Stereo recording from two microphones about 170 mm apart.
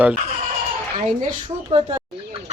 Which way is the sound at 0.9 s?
45° right (ahead or behind).